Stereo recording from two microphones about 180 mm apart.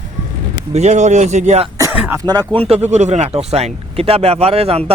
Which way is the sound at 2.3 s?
25° right (ahead or behind).